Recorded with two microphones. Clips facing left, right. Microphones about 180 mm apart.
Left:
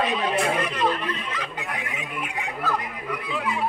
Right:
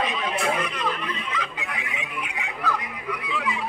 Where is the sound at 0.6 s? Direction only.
45° left (ahead or behind).